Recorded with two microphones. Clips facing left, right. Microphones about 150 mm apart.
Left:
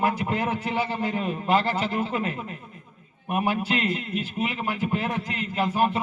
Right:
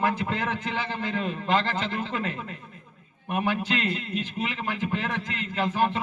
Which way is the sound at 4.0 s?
30° right (ahead or behind).